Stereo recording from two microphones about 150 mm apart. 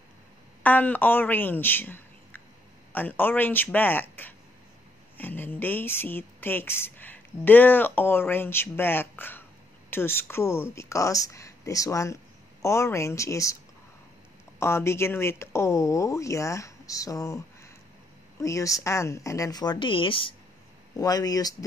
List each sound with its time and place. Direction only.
0.7 s speech: 10° left (ahead or behind)
14.6 s speech: 15° left (ahead or behind)
18.4 s speech: 20° left (ahead or behind)
20.9 s speech: 25° left (ahead or behind)